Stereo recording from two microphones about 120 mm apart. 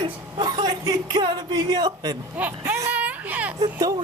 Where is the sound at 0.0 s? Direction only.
40° right (ahead or behind).